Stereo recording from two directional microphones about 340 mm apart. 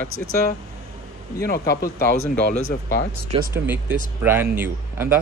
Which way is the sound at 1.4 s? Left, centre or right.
Left.